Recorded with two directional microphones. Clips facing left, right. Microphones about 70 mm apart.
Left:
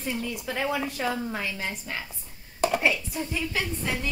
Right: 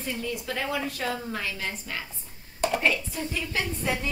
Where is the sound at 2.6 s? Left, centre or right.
Centre.